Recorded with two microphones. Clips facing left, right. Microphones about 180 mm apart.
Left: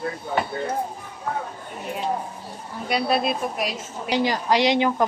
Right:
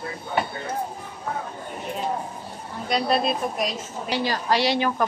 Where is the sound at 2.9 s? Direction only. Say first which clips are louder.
Even; 5° left (ahead or behind).